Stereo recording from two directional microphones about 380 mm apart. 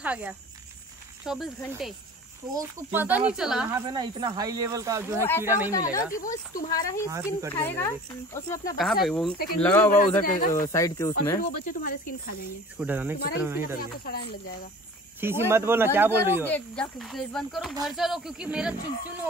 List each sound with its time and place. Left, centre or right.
0.0 s speech: centre
5.7 s speech: centre
7.1 s speech: centre
7.5 s speech: centre
10.2 s speech: left
10.5 s speech: centre
11.3 s speech: left
12.7 s speech: centre
13.7 s speech: left
15.1 s speech: centre